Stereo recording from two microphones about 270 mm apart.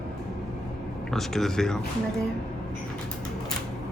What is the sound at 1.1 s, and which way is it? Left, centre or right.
Speech, centre.